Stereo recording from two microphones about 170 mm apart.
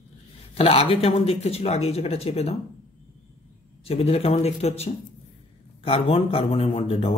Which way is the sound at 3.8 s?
35° left (ahead or behind).